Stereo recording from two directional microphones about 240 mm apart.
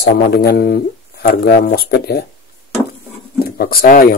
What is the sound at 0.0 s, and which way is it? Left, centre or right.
Speech, left.